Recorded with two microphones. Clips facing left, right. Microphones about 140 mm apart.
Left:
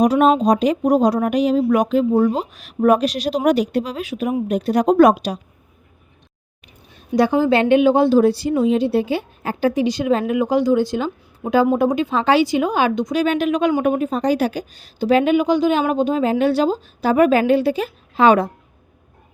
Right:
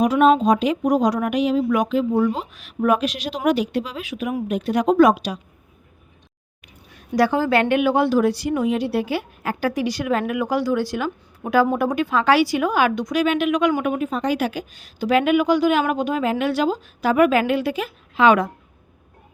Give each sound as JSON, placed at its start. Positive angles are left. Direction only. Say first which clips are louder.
{"t": 0.0, "sound": "speech", "louder": "left 1 dB", "side_deg": 40}
{"t": 6.9, "sound": "a woman's voice", "louder": "left 2 dB", "side_deg": 20}
{"t": 13.2, "sound": "speech", "louder": "even", "side_deg": 40}